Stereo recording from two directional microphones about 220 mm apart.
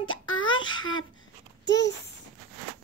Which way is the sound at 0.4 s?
20° left (ahead or behind).